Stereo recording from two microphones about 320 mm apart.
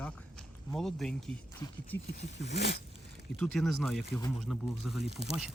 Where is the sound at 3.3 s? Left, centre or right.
Centre.